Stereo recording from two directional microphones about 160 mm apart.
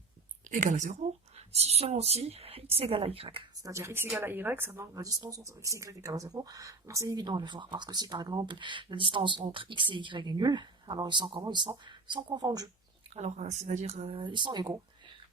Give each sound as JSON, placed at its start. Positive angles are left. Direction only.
{"t": 0.5, "sound": "speech", "side_deg": -55}
{"t": 3.6, "sound": "a woman's voice", "side_deg": -20}
{"t": 13.1, "sound": "speech", "side_deg": -45}